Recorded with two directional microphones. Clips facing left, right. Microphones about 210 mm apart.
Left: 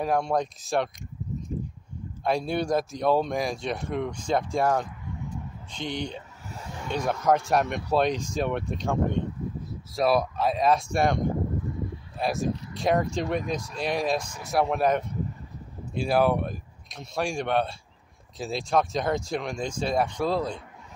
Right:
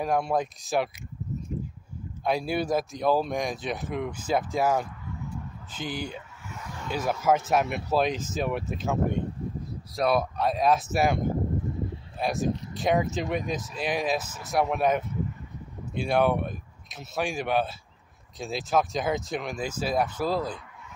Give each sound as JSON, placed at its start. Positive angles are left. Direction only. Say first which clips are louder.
{"t": 0.0, "sound": "speech", "louder": "left 1 dB", "side_deg": 0}
{"t": 2.2, "sound": "speech", "louder": "left 1 dB", "side_deg": -5}
{"t": 6.5, "sound": "a sound", "louder": "left 1 dB", "side_deg": 30}
{"t": 6.9, "sound": "speech", "louder": "left 1 dB", "side_deg": -5}